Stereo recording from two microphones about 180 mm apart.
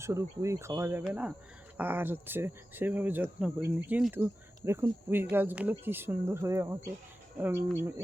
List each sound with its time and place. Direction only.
0.0 s speech: 15° right (ahead or behind)